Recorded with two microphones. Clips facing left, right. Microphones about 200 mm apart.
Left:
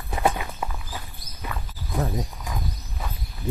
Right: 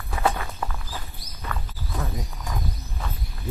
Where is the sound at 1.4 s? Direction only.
15° left (ahead or behind).